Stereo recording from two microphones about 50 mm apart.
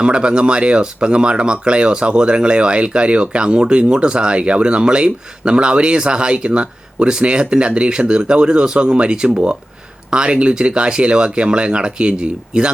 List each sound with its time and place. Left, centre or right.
0.0 s speech: centre